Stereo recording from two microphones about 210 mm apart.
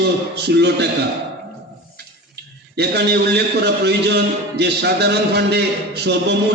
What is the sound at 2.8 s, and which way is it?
A man's voice, 50° right (ahead or behind).